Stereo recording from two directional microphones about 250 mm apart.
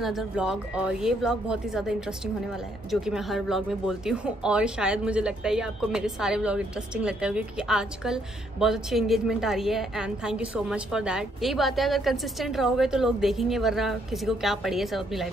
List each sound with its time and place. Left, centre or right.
0.0 s speech: centre